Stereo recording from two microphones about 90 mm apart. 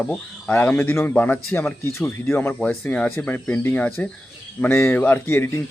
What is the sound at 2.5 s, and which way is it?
Speech, 10° left (ahead or behind).